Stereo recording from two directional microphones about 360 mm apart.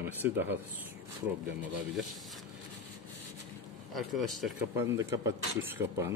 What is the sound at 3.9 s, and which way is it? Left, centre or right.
Speech, centre.